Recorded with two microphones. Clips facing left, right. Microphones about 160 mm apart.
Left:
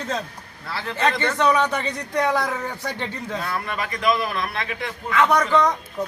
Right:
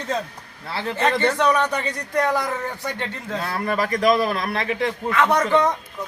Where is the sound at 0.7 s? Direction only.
25° right (ahead or behind).